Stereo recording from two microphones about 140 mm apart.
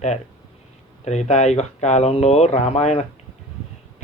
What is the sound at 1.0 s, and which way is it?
Speech, 55° left (ahead or behind).